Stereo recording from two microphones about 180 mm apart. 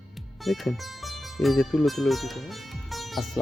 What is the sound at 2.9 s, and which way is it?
Music, centre (ahead or behind).